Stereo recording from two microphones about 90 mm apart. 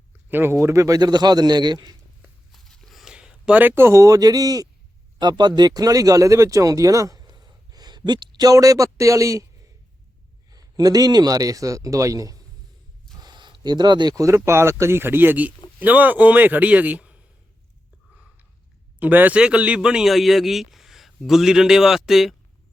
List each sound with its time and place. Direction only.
0.3 s speech: 20° right (ahead or behind)
0.6 s a man's voice: 35° right (ahead or behind); by 2.0 s 50° right (ahead or behind)
2.5 s a sound: centre (ahead or behind)
3.0 s a sound: 10° right (ahead or behind)
3.6 s a man's voice: 25° right (ahead or behind)
10.5 s a man's voice: 45° right (ahead or behind)
13.1 s a sound: 55° right (ahead or behind)
14.3 s a man's voice: 30° right (ahead or behind); by 17.2 s 15° right (ahead or behind)
18.9 s a man's voice: 20° right (ahead or behind); by 22.4 s 5° right (ahead or behind)